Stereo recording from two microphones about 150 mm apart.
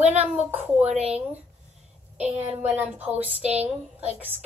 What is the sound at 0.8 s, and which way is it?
Speech, 45° right (ahead or behind).